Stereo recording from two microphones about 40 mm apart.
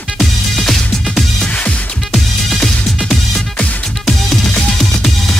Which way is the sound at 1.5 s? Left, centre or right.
Left.